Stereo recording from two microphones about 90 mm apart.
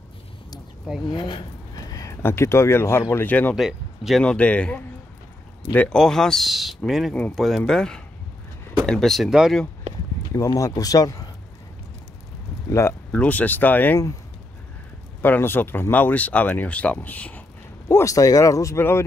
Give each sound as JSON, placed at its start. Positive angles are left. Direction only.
{"t": 1.1, "sound": "speech", "side_deg": 60}
{"t": 1.8, "sound": "a sound", "side_deg": 40}
{"t": 2.2, "sound": "speech", "side_deg": 30}
{"t": 3.5, "sound": "speech", "side_deg": -5}
{"t": 4.2, "sound": "speech", "side_deg": 15}
{"t": 5.9, "sound": "a man's voice", "side_deg": 5}
{"t": 10.3, "sound": "speech", "side_deg": 40}
{"t": 12.6, "sound": "speech", "side_deg": 35}
{"t": 13.1, "sound": "speech", "side_deg": 15}
{"t": 15.2, "sound": "speech", "side_deg": 20}
{"t": 17.8, "sound": "speech", "side_deg": 40}
{"t": 18.8, "sound": "speech", "side_deg": 25}